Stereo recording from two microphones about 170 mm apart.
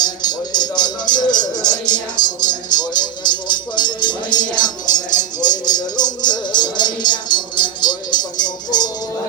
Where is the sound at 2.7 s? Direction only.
25° left (ahead or behind).